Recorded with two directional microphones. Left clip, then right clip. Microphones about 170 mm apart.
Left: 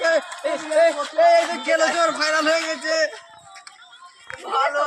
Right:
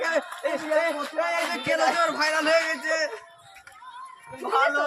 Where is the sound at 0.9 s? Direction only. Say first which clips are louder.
Left 10 dB; 35° left (ahead or behind).